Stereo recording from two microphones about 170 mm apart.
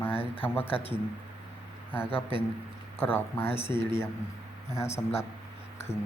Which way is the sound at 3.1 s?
15° left (ahead or behind).